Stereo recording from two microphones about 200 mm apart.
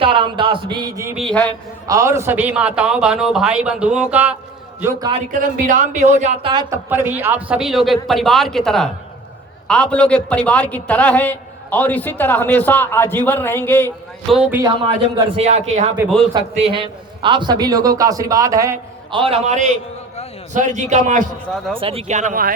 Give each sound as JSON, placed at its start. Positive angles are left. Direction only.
{"t": 0.0, "sound": "speech", "side_deg": -25}
{"t": 1.1, "sound": "a man's voice", "side_deg": 0}
{"t": 1.9, "sound": "a man's voice", "side_deg": -15}
{"t": 5.1, "sound": "speech", "side_deg": -40}
{"t": 6.5, "sound": "speech", "side_deg": -20}
{"t": 6.9, "sound": "a man's voice", "side_deg": -10}
{"t": 14.3, "sound": "a man's voice", "side_deg": 0}
{"t": 15.4, "sound": "a man's voice", "side_deg": -35}
{"t": 19.2, "sound": "speech", "side_deg": -30}